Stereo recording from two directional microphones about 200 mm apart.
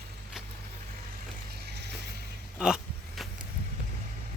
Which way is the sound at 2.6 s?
5° right (ahead or behind).